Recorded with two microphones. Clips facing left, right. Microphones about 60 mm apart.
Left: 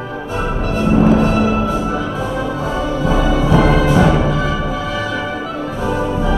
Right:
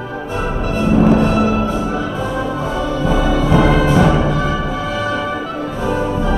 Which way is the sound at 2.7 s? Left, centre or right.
Centre.